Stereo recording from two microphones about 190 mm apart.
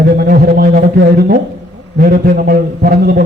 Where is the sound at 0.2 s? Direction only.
55° right (ahead or behind).